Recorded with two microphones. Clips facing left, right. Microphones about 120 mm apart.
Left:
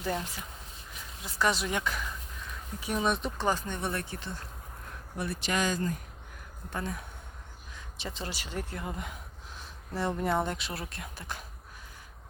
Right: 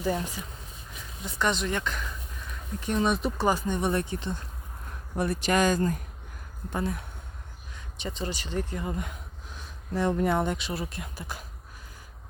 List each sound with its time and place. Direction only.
0.0 s speech: centre (ahead or behind); by 4.4 s 20° right (ahead or behind)
5.1 s speech: 45° right (ahead or behind)
6.7 s speech: 5° right (ahead or behind)